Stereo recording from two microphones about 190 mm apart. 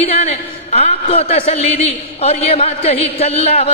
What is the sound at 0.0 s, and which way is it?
A man's voice, 35° left (ahead or behind).